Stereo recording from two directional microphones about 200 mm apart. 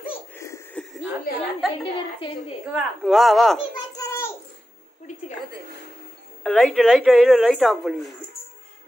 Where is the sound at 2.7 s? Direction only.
5° right (ahead or behind).